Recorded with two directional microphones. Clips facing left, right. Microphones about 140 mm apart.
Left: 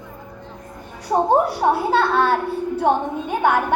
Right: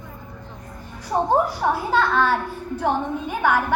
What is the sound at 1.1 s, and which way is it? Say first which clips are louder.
A woman's voice: left 3 dB; 20° left (ahead or behind).